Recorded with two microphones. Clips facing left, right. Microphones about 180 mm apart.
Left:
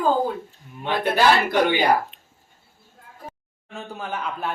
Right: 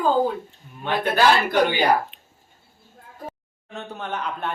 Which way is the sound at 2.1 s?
5° right (ahead or behind).